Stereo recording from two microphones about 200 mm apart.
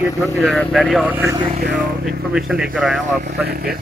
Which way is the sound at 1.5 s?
40° right (ahead or behind).